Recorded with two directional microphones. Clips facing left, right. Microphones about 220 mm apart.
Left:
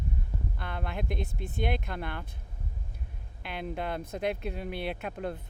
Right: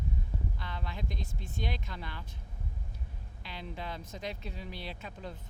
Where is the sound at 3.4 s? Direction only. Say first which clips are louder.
Left 7 dB; 55° left (ahead or behind).